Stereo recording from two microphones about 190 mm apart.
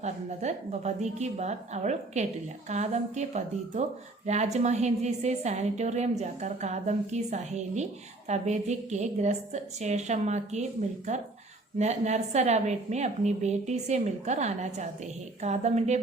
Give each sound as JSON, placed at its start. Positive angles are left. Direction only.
{"t": 0.0, "sound": "a woman's voice", "side_deg": -35}